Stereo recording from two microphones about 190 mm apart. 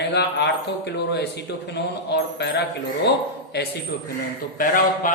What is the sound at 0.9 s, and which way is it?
Speech, 60° left (ahead or behind).